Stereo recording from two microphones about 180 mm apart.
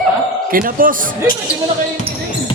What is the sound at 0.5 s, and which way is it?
Speech, 50° right (ahead or behind).